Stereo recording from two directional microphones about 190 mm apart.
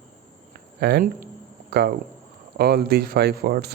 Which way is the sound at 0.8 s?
55° right (ahead or behind).